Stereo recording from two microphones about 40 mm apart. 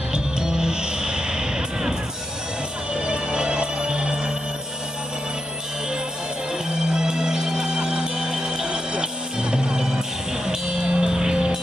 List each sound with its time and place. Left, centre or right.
0.1 s music: centre
2.9 s music: right
6.7 s music: centre